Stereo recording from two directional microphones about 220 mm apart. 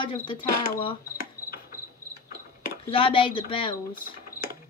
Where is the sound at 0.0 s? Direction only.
25° left (ahead or behind).